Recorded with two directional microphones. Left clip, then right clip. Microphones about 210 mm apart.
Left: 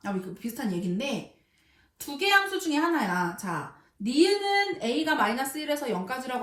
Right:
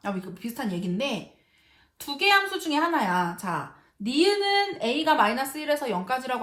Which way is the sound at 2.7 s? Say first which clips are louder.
Right 2 dB; 20° right (ahead or behind).